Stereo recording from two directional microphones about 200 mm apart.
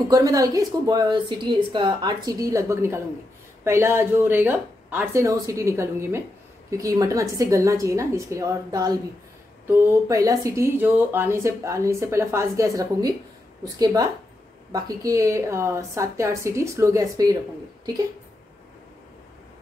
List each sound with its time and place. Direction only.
0.1 s speech: 20° right (ahead or behind)
14.7 s speech: 15° right (ahead or behind)